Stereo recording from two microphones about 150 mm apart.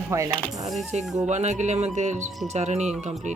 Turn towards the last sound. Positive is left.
turn(degrees=-50)  # may be behind; listen again after turning